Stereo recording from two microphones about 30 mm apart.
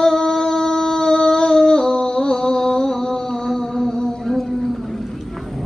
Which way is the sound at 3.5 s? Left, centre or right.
Centre.